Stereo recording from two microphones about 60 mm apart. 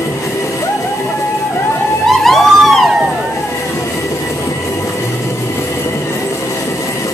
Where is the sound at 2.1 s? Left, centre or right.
Centre.